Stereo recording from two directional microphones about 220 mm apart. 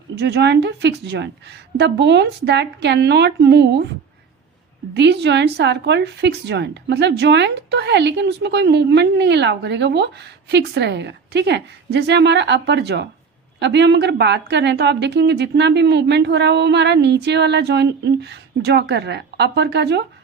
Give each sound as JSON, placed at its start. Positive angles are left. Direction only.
{"t": 0.2, "sound": "a woman's voice", "side_deg": -50}
{"t": 4.9, "sound": "a woman's voice", "side_deg": -50}